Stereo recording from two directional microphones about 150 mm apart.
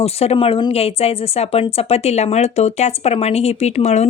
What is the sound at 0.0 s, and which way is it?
Speech, 45° left (ahead or behind).